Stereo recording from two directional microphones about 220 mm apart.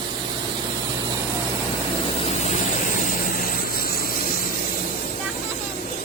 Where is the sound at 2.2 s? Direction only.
30° left (ahead or behind).